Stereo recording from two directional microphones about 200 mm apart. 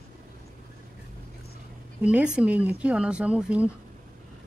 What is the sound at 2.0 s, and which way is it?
Speech, 5° right (ahead or behind).